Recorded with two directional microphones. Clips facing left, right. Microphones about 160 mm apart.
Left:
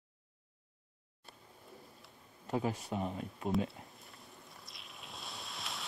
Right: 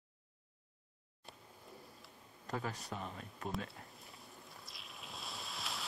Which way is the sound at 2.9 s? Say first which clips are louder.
Left 8 dB; 35° left (ahead or behind).